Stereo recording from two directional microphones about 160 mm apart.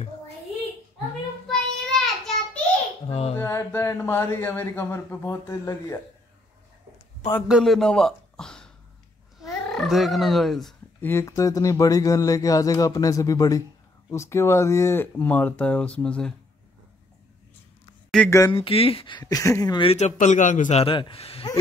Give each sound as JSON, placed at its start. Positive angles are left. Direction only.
{"t": 1.5, "sound": "child singing", "side_deg": 5}
{"t": 3.1, "sound": "a sound", "side_deg": 40}
{"t": 3.3, "sound": "speech", "side_deg": 15}
{"t": 7.4, "sound": "speech", "side_deg": 0}
{"t": 11.0, "sound": "speech", "side_deg": 15}
{"t": 18.1, "sound": "speech", "side_deg": 5}
{"t": 18.5, "sound": "speech", "side_deg": 35}
{"t": 19.9, "sound": "a man's voice", "side_deg": 50}
{"t": 20.8, "sound": "speech", "side_deg": 35}